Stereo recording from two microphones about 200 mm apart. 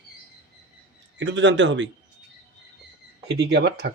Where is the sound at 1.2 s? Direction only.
65° right (ahead or behind).